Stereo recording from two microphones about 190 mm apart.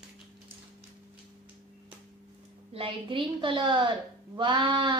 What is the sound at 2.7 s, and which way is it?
A woman's voice, 30° right (ahead or behind).